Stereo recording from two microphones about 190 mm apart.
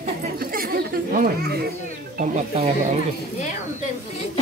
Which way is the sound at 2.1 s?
35° right (ahead or behind).